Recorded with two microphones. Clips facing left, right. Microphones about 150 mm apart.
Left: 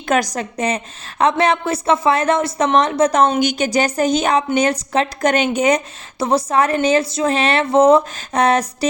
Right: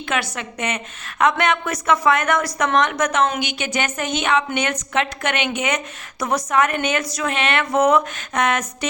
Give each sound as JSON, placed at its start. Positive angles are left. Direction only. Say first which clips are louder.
{"t": 0.1, "sound": "a woman's voice", "louder": "left 7 dB", "side_deg": 40}